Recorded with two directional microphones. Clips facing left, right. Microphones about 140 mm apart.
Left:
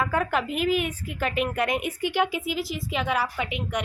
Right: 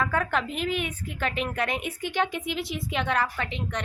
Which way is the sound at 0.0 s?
5° left (ahead or behind).